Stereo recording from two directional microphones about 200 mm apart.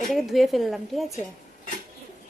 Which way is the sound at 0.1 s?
Centre (ahead or behind).